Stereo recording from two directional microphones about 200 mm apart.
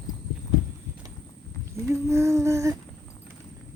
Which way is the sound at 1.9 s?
15° right (ahead or behind).